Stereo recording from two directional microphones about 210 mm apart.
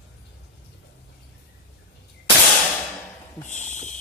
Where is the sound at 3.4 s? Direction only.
35° left (ahead or behind).